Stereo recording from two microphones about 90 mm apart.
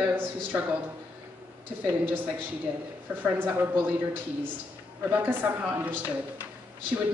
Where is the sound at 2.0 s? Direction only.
20° right (ahead or behind).